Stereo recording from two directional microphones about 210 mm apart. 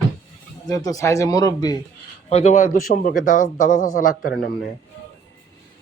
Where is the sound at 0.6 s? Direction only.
20° left (ahead or behind).